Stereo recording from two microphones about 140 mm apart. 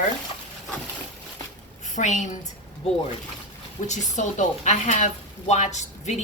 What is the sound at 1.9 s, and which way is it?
Speech, 60° left (ahead or behind).